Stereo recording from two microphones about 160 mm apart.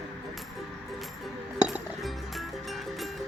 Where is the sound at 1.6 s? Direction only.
Centre (ahead or behind).